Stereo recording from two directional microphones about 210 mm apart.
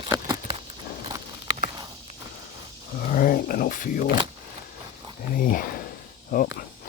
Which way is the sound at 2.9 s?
45° left (ahead or behind).